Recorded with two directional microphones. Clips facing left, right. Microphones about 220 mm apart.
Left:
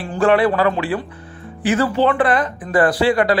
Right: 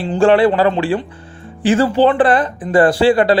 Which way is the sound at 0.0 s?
25° right (ahead or behind).